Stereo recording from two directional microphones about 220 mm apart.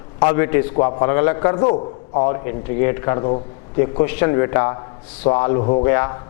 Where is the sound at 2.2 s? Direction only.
15° left (ahead or behind).